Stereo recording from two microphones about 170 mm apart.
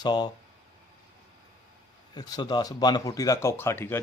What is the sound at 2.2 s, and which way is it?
Speech, 25° left (ahead or behind).